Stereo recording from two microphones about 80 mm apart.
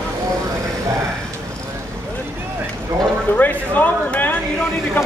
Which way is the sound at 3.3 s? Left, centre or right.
Left.